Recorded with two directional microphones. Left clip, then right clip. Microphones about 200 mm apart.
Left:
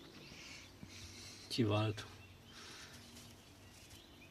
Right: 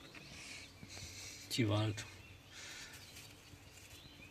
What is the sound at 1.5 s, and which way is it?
Speech, 5° left (ahead or behind).